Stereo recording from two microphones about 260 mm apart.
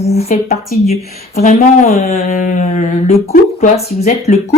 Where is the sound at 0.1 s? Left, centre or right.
Left.